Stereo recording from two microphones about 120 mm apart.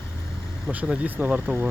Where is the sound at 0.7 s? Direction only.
10° right (ahead or behind).